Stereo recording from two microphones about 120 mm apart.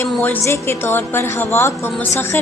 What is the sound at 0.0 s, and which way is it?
A woman's voice, 20° left (ahead or behind).